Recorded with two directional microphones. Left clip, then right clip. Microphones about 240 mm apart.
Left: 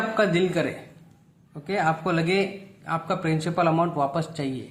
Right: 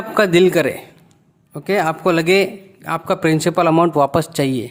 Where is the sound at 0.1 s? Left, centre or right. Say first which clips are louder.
Right 13 dB; right.